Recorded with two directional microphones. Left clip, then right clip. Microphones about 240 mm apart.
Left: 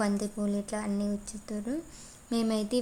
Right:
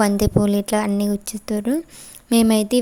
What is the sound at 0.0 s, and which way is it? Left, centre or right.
A woman's voice, right.